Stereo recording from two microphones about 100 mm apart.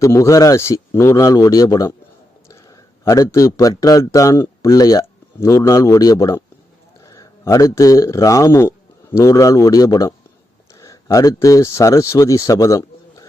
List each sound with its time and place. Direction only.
0.0 s a man's voice: 30° left (ahead or behind)